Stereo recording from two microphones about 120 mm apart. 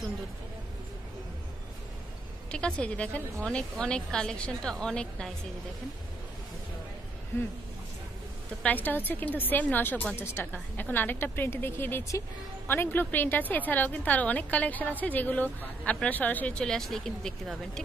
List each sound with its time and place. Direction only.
2.5 s a woman's voice: 10° left (ahead or behind)
8.6 s a woman's voice: 15° left (ahead or behind)